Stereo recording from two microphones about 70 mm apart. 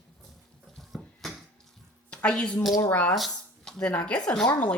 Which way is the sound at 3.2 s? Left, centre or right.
Centre.